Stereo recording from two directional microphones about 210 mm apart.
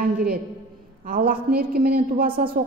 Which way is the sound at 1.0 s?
45° right (ahead or behind).